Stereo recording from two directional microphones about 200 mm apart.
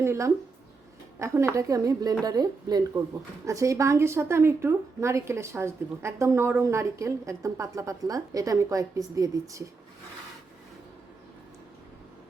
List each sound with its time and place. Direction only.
0.0 s a woman's voice: 15° right (ahead or behind)